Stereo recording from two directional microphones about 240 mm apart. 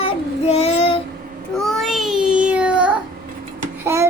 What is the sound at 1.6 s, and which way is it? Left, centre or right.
Child singing, centre.